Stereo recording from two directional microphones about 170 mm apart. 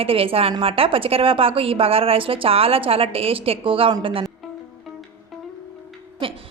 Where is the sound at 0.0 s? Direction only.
35° right (ahead or behind).